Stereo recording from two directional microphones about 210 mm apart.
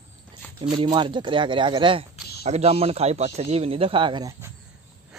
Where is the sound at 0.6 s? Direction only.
20° right (ahead or behind).